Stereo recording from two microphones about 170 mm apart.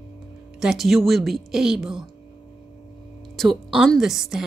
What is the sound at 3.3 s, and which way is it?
A woman's voice, centre (ahead or behind).